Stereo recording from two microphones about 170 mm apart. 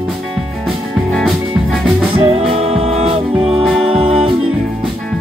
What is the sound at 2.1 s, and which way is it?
Music, 30° right (ahead or behind).